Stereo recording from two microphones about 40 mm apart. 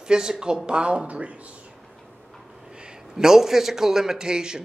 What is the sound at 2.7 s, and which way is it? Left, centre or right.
A man's voice, right.